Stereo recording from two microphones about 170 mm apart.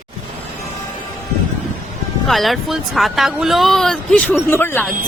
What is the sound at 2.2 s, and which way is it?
A woman's voice, centre (ahead or behind).